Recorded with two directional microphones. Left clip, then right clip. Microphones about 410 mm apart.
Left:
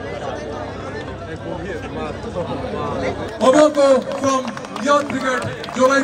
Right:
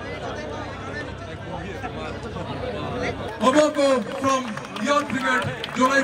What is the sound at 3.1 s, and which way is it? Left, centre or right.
Speech, left.